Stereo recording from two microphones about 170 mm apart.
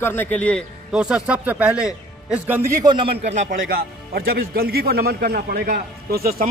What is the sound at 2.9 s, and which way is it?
Speech, 30° right (ahead or behind).